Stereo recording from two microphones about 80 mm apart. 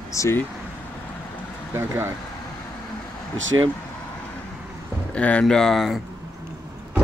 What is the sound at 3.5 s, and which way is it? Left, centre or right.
Speech, right.